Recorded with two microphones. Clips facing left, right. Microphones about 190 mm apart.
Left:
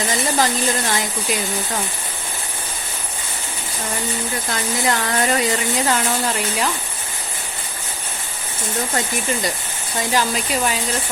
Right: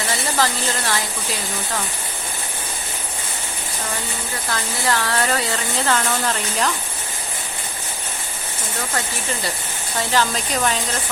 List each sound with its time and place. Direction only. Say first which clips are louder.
0.3 s speech: left 2 dB; 20° left (ahead or behind)
4.5 s speech: left 1 dB; 20° left (ahead or behind)
10.1 s speech: left 1 dB; 10° left (ahead or behind)